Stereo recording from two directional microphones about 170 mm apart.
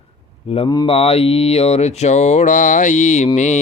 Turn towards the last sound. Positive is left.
turn(degrees=45)  # may be behind; listen again after turning